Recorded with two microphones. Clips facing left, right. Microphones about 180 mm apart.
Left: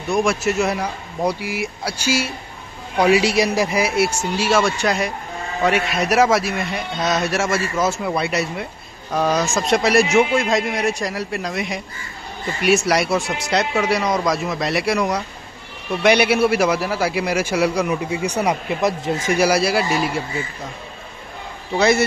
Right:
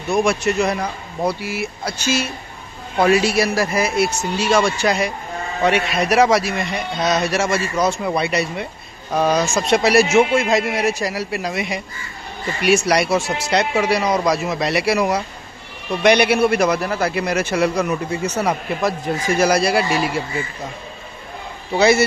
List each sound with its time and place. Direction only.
0.1 s a man's voice: centre (ahead or behind); by 19.4 s 20° left (ahead or behind)
19.4 s a man's voice: 5° left (ahead or behind)
21.7 s a man's voice: 5° right (ahead or behind)